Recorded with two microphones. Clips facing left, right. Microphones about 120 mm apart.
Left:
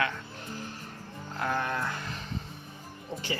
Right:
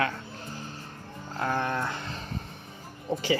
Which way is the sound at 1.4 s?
30° right (ahead or behind).